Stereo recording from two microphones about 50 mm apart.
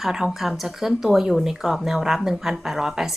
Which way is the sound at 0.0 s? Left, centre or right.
Centre.